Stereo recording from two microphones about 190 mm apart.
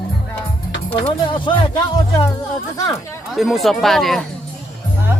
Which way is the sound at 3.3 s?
Centre (ahead or behind).